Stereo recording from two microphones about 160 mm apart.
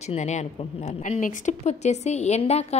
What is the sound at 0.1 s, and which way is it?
A woman's voice, 45° left (ahead or behind).